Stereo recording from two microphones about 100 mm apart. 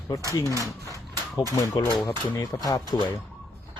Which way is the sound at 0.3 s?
35° left (ahead or behind).